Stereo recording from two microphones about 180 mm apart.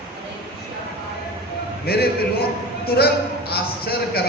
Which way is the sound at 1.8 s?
60° left (ahead or behind).